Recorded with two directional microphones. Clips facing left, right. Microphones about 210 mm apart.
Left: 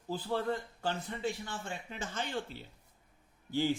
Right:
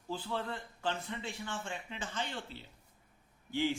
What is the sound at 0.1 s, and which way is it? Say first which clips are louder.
A man's voice: left 5 dB; 40° left (ahead or behind).